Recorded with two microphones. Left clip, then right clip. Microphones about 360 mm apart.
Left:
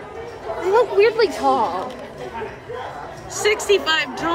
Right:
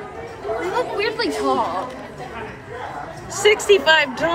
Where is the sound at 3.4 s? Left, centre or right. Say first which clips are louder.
Right 4 dB; centre.